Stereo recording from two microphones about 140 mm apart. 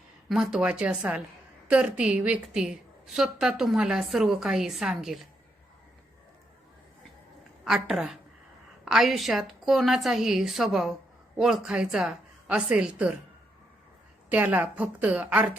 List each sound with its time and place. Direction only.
0.3 s a woman's voice: 5° right (ahead or behind)
7.6 s a woman's voice: centre (ahead or behind)
14.3 s a woman's voice: 10° right (ahead or behind)